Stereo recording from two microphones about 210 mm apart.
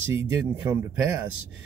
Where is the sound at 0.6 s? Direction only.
15° right (ahead or behind).